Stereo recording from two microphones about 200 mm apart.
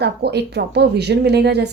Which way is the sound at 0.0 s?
55° right (ahead or behind).